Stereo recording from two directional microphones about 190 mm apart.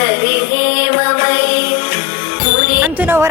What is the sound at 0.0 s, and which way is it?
Music, 60° left (ahead or behind).